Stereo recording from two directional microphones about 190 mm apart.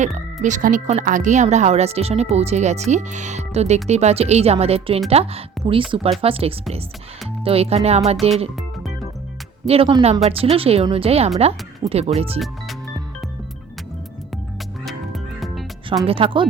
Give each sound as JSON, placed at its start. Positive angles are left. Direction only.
{"t": 0.4, "sound": "speech", "side_deg": -40}
{"t": 9.6, "sound": "speech", "side_deg": -30}
{"t": 14.8, "sound": "music", "side_deg": 0}
{"t": 16.0, "sound": "speech", "side_deg": -30}